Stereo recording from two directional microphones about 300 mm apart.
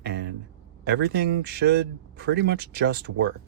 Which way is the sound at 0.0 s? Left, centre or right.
Right.